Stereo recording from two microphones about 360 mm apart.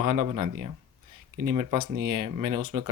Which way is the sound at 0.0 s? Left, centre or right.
Right.